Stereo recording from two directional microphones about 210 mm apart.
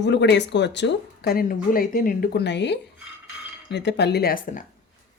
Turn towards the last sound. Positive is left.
turn(degrees=40)  # may be behind; listen again after turning